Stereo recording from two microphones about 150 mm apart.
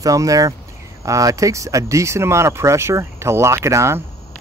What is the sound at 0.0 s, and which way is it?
Speech, 20° right (ahead or behind).